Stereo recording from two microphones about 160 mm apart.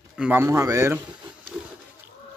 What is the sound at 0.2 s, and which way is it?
Speech, 15° right (ahead or behind).